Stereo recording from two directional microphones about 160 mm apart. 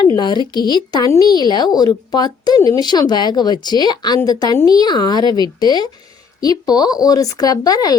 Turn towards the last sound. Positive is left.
turn(degrees=25)  # may be behind; listen again after turning